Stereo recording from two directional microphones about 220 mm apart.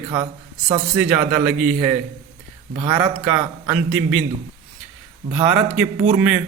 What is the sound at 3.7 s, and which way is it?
Speech, 5° right (ahead or behind).